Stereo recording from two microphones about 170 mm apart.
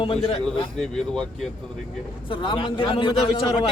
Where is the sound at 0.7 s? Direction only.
5° left (ahead or behind).